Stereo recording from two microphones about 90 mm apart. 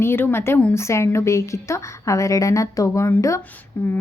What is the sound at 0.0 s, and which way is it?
A woman's voice, 25° left (ahead or behind).